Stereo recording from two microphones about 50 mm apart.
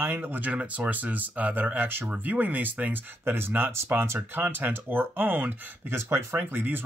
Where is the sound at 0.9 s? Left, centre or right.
Right.